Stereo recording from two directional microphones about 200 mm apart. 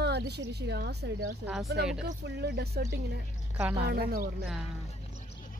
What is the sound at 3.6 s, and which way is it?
Speech, 10° right (ahead or behind).